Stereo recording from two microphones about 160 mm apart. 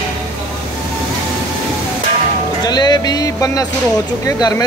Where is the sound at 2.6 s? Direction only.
25° left (ahead or behind).